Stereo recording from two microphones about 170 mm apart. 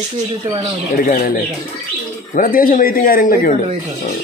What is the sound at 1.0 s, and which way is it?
A man's voice, 55° left (ahead or behind).